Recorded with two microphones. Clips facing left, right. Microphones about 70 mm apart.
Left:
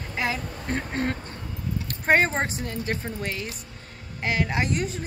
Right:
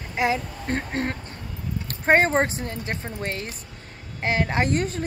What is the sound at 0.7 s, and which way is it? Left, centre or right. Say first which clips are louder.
Speech: right 1 dB; right.